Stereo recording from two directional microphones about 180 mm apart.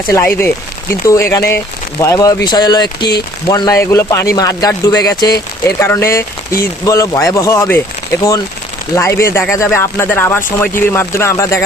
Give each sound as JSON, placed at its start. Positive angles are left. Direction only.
{"t": 0.1, "sound": "speech", "side_deg": 15}
{"t": 9.0, "sound": "speech", "side_deg": 15}